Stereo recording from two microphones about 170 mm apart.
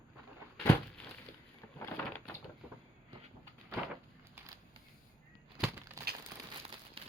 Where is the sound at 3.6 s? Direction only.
10° right (ahead or behind).